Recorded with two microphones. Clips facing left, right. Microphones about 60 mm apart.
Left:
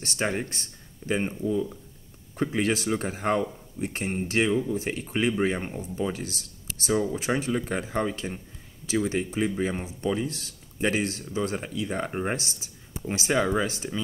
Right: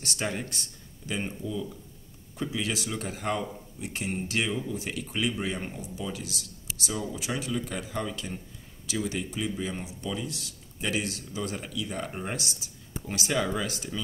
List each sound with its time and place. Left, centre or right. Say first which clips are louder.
0.0 s speech: left 4 dB; left